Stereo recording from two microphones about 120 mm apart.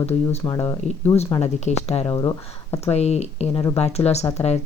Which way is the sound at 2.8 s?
60° left (ahead or behind).